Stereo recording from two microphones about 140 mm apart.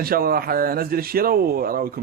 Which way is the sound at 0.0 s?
90° right.